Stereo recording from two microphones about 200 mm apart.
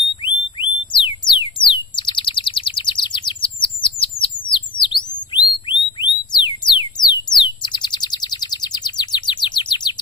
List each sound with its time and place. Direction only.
0.6 s bird: 25° left (ahead or behind)
5.7 s music: 20° left (ahead or behind)
7.3 s bird: 20° left (ahead or behind)